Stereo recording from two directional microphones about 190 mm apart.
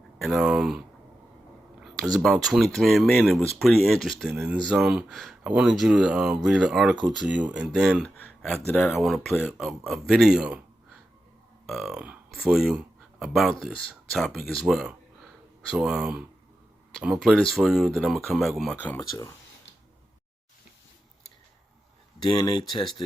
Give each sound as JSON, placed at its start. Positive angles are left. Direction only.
{"t": 0.2, "sound": "speech", "side_deg": 0}
{"t": 1.8, "sound": "speech", "side_deg": 0}
{"t": 11.6, "sound": "speech", "side_deg": 0}
{"t": 22.2, "sound": "speech", "side_deg": 20}